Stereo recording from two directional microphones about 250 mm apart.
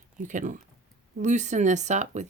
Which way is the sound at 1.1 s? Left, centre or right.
Right.